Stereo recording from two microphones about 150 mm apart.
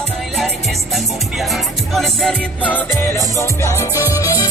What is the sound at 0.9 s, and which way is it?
Music, centre (ahead or behind).